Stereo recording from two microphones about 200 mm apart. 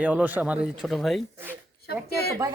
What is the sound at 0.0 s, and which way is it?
Speech, 5° right (ahead or behind).